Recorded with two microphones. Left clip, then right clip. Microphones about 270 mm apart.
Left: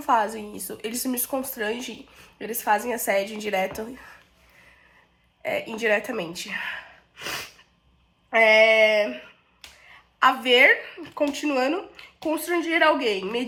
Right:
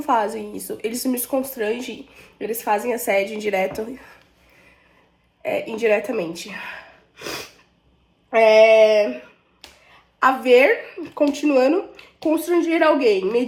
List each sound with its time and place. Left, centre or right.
0.0 s a woman's voice: centre
0.6 s a woman's voice: centre
3.4 s a woman's voice: centre
5.4 s a woman's voice: centre
7.2 s snort: centre
8.3 s a woman's voice: centre